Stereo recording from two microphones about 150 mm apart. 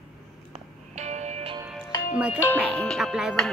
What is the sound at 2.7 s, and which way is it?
Speech, 5° left (ahead or behind).